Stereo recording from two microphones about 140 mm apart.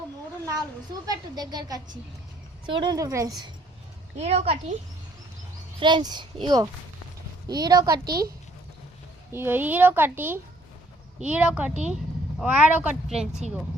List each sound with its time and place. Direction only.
1.0 s speech: 30° right (ahead or behind)
4.2 s a woman's voice: 50° right (ahead or behind)
5.8 s a child's voice: 30° right (ahead or behind)
8.0 s speech: 90° right
9.3 s a woman's voice: 15° right (ahead or behind)